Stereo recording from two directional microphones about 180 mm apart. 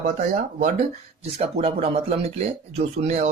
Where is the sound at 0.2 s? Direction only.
40° right (ahead or behind).